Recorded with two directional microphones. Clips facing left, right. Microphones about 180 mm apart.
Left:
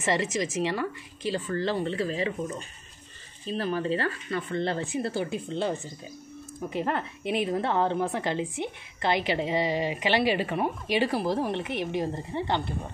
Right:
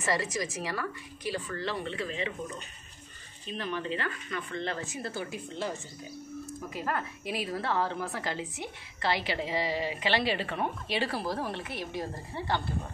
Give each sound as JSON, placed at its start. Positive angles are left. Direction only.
{"t": 0.0, "sound": "a woman's voice", "side_deg": 25}